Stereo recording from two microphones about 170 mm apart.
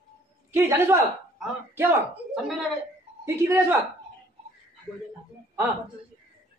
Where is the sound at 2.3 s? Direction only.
Centre (ahead or behind).